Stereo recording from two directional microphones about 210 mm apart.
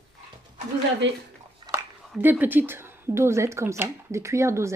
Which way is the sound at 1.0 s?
60° right (ahead or behind).